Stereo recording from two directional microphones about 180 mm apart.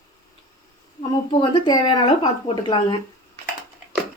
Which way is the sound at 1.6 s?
25° left (ahead or behind).